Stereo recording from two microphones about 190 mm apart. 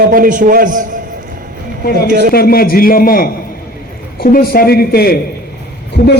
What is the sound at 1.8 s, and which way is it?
Speech, 55° left (ahead or behind).